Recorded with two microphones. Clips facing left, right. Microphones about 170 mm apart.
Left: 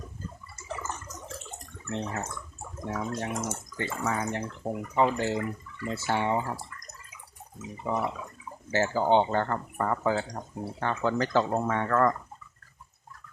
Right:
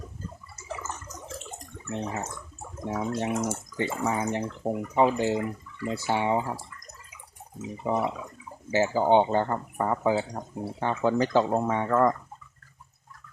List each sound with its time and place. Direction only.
0.8 s a sound: 5° right (ahead or behind)
2.8 s speech: 15° right (ahead or behind)
7.9 s speech: 15° right (ahead or behind)